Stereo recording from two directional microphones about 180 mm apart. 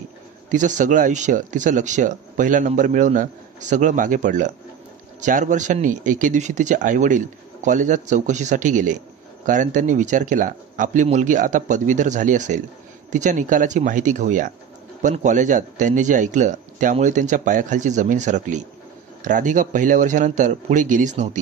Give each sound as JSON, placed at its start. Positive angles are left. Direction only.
{"t": 0.5, "sound": "speech", "side_deg": -45}